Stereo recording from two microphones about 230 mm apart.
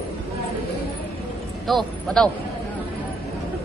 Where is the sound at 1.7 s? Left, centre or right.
Centre.